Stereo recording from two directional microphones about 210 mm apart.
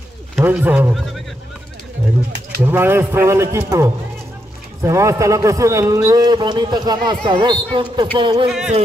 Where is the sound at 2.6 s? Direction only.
10° right (ahead or behind).